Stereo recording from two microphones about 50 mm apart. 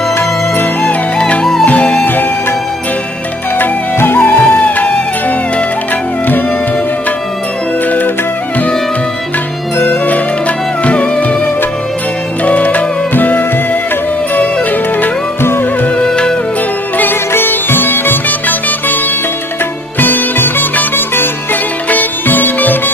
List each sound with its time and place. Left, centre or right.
0.8 s music: left
3.5 s music: left
4.6 s music: left
9.8 s music: left
16.0 s music: centre
17.0 s sitar: left
20.0 s music: left